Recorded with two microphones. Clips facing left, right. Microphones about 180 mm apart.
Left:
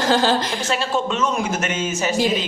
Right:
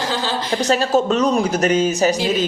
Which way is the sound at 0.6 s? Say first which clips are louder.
Right 6 dB; 40° right (ahead or behind).